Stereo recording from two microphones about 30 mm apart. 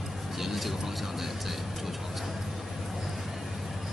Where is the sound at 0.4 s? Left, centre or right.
Centre.